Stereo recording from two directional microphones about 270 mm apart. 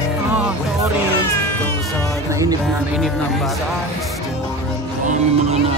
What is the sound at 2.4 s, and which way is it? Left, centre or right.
Speech, centre.